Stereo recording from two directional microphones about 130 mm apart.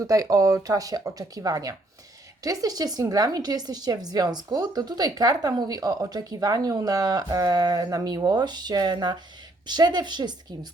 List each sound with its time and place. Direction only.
0.0 s a woman's voice: 25° right (ahead or behind)